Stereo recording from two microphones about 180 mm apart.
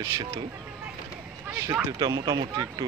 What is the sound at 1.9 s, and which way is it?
Speech, 25° right (ahead or behind).